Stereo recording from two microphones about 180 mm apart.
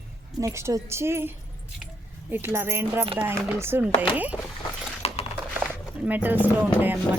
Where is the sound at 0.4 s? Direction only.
15° right (ahead or behind).